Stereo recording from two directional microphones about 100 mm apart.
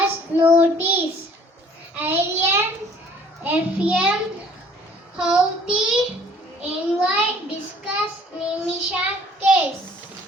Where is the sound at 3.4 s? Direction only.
15° right (ahead or behind).